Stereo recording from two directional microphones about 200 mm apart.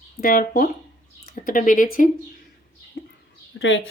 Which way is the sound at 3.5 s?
75° left (ahead or behind).